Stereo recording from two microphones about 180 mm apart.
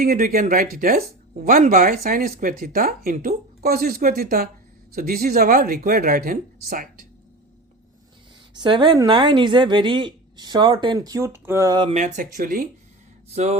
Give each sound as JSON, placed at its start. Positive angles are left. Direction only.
{"t": 0.0, "sound": "speech", "side_deg": -55}
{"t": 8.5, "sound": "speech", "side_deg": -25}
{"t": 11.9, "sound": "speech", "side_deg": -45}
{"t": 13.3, "sound": "music", "side_deg": -35}